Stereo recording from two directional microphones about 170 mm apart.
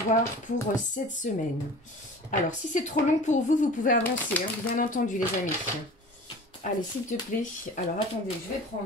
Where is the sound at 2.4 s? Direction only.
45° left (ahead or behind).